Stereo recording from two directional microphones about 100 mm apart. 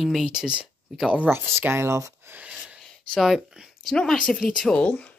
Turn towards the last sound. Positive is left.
turn(degrees=10)  # may be behind; listen again after turning